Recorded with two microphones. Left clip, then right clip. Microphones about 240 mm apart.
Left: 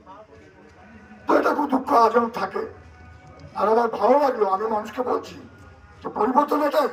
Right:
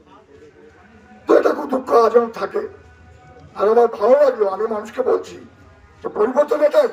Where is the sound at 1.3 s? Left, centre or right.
Centre.